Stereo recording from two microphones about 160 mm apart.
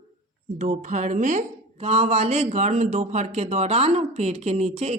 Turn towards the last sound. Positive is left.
turn(degrees=-40)  # may be behind; listen again after turning